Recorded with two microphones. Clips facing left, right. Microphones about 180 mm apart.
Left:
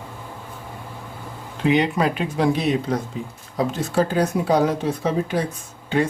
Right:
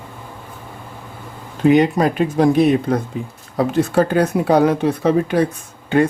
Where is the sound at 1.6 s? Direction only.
45° right (ahead or behind).